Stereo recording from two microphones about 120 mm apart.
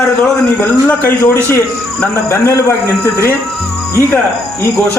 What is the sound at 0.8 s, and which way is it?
A man's voice, 15° left (ahead or behind).